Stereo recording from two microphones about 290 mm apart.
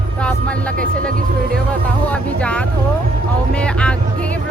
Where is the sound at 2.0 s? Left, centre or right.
Centre.